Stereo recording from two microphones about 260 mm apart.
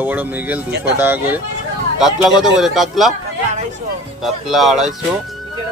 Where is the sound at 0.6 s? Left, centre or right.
Right.